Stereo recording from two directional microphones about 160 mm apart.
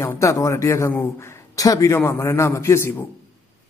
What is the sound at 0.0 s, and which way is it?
A man's voice, 20° left (ahead or behind).